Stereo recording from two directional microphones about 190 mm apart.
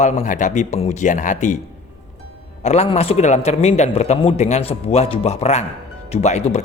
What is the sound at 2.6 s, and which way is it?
Speech, 35° left (ahead or behind).